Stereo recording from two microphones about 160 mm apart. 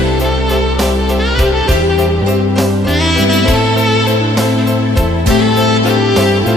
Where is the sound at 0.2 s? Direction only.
Centre (ahead or behind).